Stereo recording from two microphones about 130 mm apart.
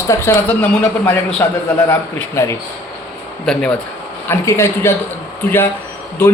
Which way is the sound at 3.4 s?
5° left (ahead or behind).